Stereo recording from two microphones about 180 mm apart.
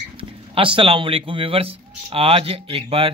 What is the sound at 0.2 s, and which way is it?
A man's voice, 30° right (ahead or behind).